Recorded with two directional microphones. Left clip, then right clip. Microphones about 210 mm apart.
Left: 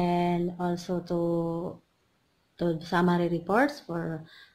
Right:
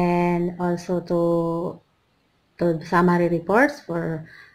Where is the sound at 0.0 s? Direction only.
5° left (ahead or behind).